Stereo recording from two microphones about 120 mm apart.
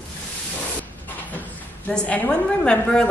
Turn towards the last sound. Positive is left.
turn(degrees=10)  # may be behind; listen again after turning